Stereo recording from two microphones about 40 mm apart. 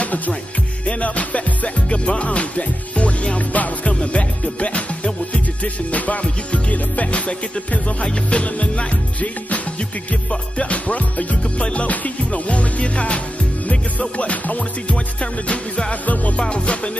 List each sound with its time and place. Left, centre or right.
0.8 s music: left